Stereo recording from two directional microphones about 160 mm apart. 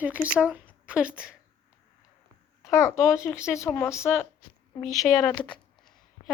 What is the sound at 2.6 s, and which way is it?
A child's voice, 20° left (ahead or behind).